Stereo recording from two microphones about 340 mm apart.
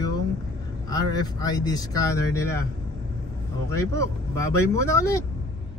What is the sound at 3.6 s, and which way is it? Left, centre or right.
Speech, centre.